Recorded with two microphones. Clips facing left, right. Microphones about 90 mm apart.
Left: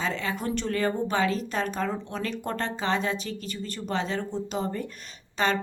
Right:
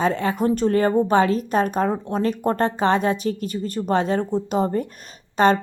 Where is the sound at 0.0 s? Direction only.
50° right (ahead or behind).